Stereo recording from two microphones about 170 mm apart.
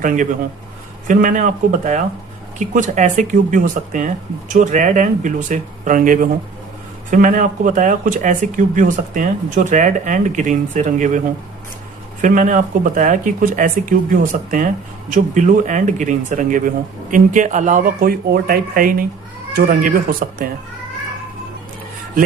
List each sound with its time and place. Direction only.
1.0 s speech: 50° right (ahead or behind)
12.2 s speech: 50° right (ahead or behind)